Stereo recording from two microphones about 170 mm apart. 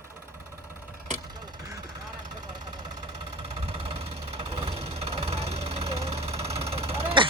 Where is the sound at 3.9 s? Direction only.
35° right (ahead or behind).